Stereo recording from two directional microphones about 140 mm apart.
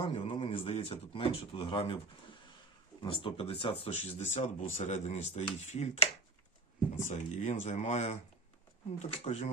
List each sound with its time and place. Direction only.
0.0 s speech: 40° left (ahead or behind)
3.0 s speech: 40° left (ahead or behind)
3.9 s speech: 55° left (ahead or behind)